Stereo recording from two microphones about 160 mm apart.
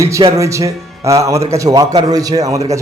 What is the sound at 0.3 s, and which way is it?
Speech, 20° right (ahead or behind).